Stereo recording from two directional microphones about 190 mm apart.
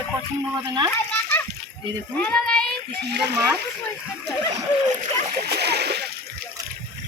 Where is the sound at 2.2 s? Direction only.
5° left (ahead or behind).